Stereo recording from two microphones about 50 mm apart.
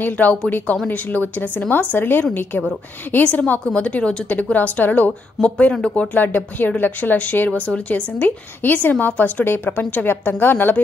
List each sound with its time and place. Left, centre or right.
0.0 s a woman's voice: left
5.4 s speech: left
6.1 s a woman's voice: left